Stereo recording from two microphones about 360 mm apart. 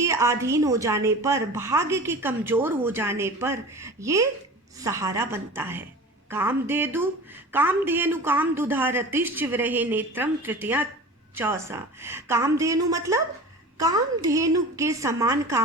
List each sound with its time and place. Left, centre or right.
0.0 s a woman's voice: centre